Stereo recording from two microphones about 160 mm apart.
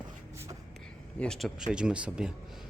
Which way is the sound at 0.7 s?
5° left (ahead or behind).